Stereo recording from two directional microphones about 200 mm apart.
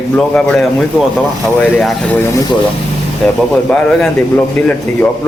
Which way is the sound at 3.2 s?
5° left (ahead or behind).